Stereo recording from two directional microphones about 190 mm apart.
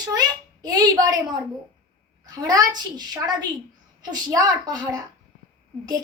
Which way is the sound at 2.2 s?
20° right (ahead or behind).